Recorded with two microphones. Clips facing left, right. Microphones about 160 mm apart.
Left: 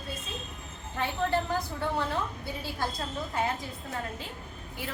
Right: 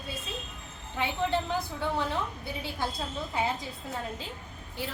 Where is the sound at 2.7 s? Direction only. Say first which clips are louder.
Left 1 dB; 5° right (ahead or behind).